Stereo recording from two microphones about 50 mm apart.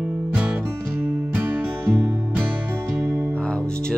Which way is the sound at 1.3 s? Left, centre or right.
Right.